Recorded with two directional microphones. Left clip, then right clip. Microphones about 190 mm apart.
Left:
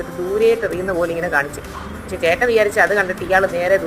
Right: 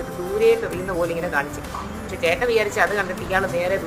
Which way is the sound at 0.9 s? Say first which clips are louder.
Left 3 dB; 20° left (ahead or behind).